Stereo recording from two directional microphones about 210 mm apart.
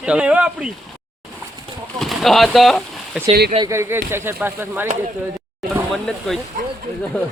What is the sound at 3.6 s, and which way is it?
Speech, 15° right (ahead or behind).